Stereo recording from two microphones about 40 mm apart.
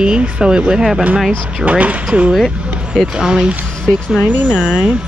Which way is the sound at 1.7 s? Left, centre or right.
Right.